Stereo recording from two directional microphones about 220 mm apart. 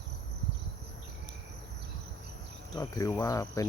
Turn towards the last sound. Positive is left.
turn(degrees=15)  # may be behind; listen again after turning